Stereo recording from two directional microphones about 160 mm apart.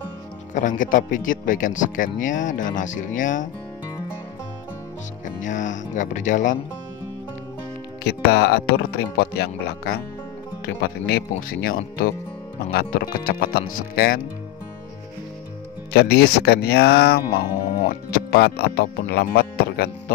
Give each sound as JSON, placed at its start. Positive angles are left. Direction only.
{"t": 0.6, "sound": "speech", "side_deg": 55}
{"t": 5.4, "sound": "speech", "side_deg": 50}
{"t": 8.0, "sound": "speech", "side_deg": 90}
{"t": 15.9, "sound": "speech", "side_deg": 90}